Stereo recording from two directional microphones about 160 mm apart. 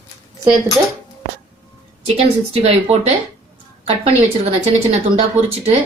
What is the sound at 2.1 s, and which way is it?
Speech, 40° right (ahead or behind).